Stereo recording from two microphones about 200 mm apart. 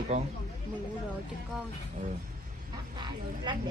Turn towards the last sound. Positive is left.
turn(degrees=-25)  # may be behind; listen again after turning